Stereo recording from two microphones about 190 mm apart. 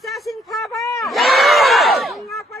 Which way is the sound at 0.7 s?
15° left (ahead or behind).